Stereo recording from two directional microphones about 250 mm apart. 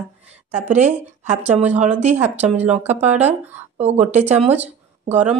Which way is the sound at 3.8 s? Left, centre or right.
Right.